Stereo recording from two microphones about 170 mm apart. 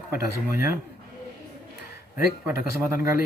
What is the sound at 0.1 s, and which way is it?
Speech, 15° right (ahead or behind).